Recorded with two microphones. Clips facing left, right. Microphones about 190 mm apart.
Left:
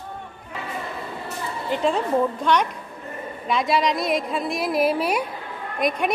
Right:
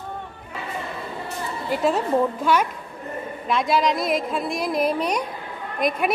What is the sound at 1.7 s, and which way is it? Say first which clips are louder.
A woman's voice: right 1 dB; 5° right (ahead or behind).